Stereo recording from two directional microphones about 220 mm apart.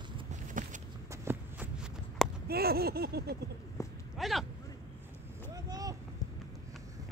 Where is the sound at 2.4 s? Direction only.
45° right (ahead or behind).